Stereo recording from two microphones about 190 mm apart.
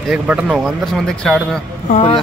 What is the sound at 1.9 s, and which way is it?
Speech, 25° left (ahead or behind).